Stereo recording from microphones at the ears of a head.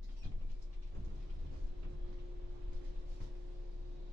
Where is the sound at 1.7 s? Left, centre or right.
Right.